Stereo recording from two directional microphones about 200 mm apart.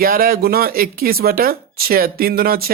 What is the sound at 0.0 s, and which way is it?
Speech, 45° right (ahead or behind).